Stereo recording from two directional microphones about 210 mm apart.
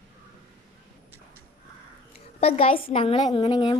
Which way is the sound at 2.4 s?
25° left (ahead or behind).